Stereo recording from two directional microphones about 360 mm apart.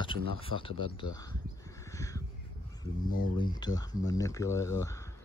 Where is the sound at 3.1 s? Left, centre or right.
Left.